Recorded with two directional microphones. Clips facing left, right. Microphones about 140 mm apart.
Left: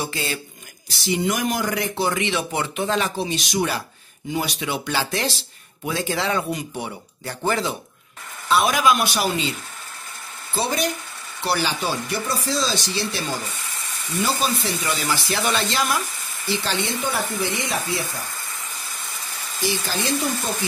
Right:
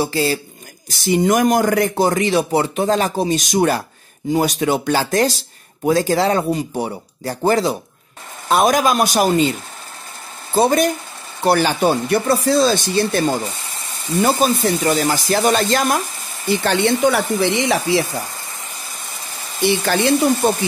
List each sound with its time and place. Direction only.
0.0 s speech: 35° right (ahead or behind)
0.8 s speech: 50° right (ahead or behind); by 18.0 s 85° right
19.6 s speech: 65° right (ahead or behind)